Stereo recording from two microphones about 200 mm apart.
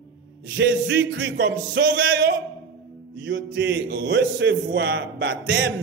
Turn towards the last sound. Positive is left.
turn(degrees=-65)  # may be behind; listen again after turning